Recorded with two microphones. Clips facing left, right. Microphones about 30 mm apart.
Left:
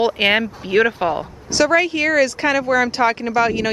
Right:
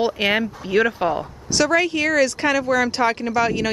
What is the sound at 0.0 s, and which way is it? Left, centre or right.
Speech, centre.